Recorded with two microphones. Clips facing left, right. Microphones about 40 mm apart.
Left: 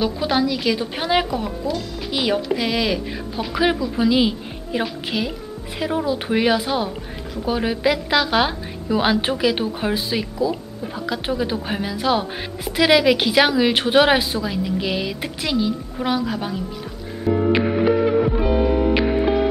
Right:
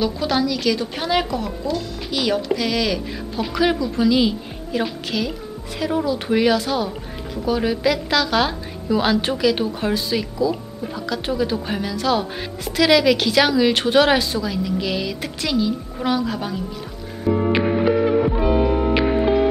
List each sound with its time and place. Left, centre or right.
0.0 s a woman's voice: centre
17.5 s music: centre